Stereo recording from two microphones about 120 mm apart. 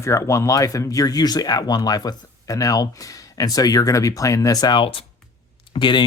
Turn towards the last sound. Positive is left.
turn(degrees=40)  # may be behind; listen again after turning